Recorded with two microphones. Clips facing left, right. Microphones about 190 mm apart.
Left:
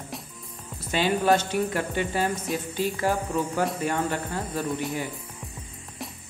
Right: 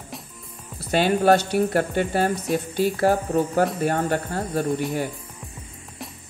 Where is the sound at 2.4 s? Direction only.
Centre (ahead or behind).